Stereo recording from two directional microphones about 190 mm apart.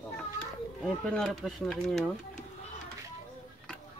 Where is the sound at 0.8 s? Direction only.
Centre (ahead or behind).